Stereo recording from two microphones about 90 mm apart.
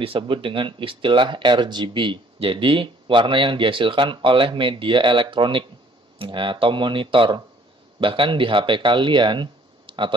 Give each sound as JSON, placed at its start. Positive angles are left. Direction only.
{"t": 0.0, "sound": "speech", "side_deg": -85}